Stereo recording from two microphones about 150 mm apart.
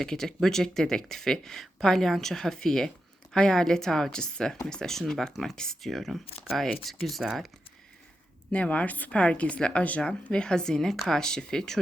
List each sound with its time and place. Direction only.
0.0 s speech: 5° left (ahead or behind)
8.5 s a woman's voice: 10° left (ahead or behind)